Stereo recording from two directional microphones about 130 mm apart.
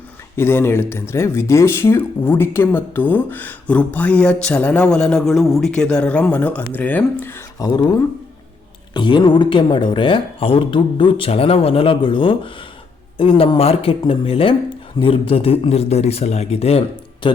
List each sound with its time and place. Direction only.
0.3 s speech: 15° left (ahead or behind)
7.7 s speech: 35° left (ahead or behind); by 16.8 s 50° left (ahead or behind)
17.2 s speech: 40° left (ahead or behind)